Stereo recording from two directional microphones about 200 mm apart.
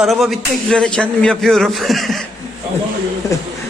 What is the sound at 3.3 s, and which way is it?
Speech, 15° left (ahead or behind).